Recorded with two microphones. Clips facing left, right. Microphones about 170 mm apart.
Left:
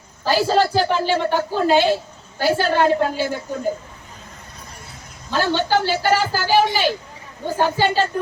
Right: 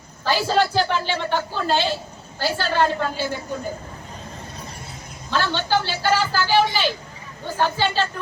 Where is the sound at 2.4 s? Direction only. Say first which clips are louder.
Left 4 dB; 55° left (ahead or behind).